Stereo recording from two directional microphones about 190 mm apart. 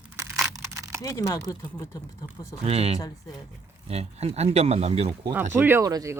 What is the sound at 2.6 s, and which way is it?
Speech, 35° right (ahead or behind).